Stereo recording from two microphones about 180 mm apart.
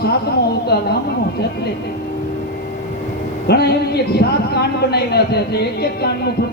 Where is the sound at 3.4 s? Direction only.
65° left (ahead or behind).